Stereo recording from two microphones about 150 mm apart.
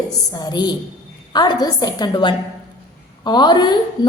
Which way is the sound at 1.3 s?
30° left (ahead or behind).